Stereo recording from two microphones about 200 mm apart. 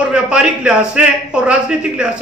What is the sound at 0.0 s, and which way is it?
A man's voice, 5° right (ahead or behind).